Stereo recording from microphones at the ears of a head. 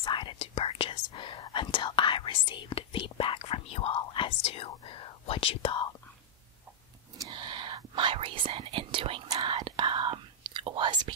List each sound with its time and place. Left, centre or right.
0.0 s speech: left
7.2 s whispering: right